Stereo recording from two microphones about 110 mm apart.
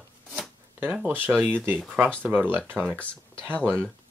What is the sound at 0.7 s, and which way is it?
Speech, 10° right (ahead or behind).